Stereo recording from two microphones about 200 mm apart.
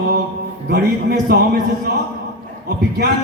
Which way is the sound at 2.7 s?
55° right (ahead or behind).